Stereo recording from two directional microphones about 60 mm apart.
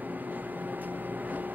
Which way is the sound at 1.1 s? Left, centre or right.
Right.